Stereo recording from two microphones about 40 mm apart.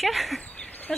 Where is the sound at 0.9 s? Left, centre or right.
Centre.